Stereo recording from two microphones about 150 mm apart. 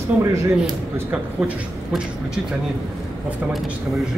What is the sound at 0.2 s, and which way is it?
Speech, 20° right (ahead or behind).